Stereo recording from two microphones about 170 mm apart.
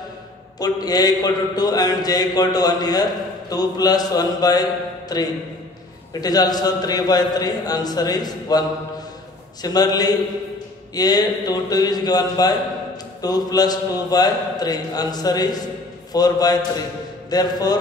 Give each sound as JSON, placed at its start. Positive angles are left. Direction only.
{"t": 0.6, "sound": "a man's voice", "side_deg": 20}